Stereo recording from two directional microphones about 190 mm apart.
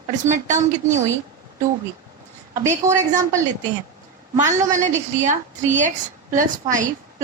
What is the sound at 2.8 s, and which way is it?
Speech, 15° right (ahead or behind).